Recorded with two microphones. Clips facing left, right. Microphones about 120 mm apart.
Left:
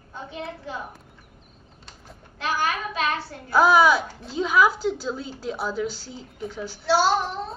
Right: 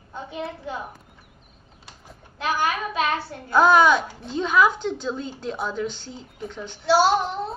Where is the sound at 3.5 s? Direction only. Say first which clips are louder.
Right 1 dB; 5° left (ahead or behind).